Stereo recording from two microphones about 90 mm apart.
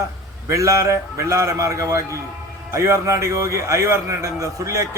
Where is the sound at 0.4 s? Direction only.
35° right (ahead or behind).